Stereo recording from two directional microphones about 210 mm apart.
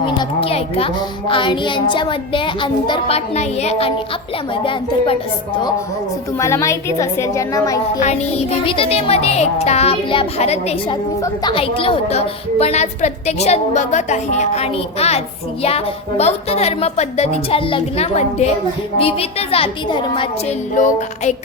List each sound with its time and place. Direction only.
0.0 s speech: 25° left (ahead or behind)
6.4 s a woman's voice: 15° left (ahead or behind)
20.7 s a woman's voice: 35° left (ahead or behind)